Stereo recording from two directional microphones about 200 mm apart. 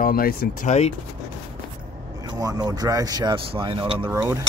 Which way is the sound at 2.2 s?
20° right (ahead or behind).